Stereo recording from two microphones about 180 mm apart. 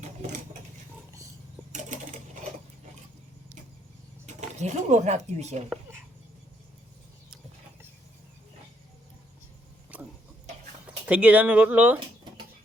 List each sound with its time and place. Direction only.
1.7 s sewing machine: 45° right (ahead or behind)
4.3 s speech: 40° right (ahead or behind)
9.9 s a sound: 5° right (ahead or behind)
11.0 s speech: 5° right (ahead or behind)